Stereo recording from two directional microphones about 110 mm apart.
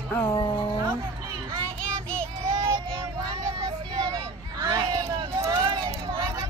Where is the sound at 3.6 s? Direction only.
30° right (ahead or behind).